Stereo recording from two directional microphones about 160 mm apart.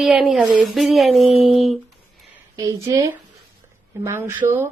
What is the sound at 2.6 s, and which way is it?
A woman's voice, 25° right (ahead or behind).